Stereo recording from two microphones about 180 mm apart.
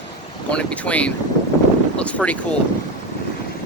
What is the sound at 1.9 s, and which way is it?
Wind noise, 5° left (ahead or behind).